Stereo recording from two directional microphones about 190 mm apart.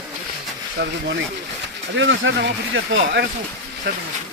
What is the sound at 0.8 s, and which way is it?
Speech, 65° right (ahead or behind).